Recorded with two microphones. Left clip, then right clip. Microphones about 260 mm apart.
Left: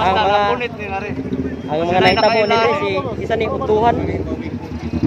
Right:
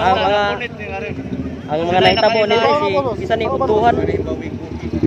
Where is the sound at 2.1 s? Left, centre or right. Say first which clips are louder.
Even; left.